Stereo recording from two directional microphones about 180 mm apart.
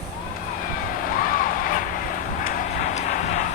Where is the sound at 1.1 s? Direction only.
50° left (ahead or behind).